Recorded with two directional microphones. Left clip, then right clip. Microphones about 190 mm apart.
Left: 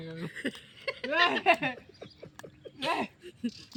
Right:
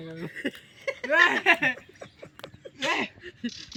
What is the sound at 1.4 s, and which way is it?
Speech, 30° right (ahead or behind).